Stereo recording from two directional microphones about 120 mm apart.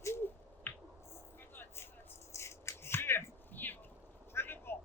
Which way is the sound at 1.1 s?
20° left (ahead or behind).